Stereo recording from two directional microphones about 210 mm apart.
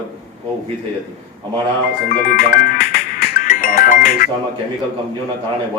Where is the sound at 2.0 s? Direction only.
45° left (ahead or behind).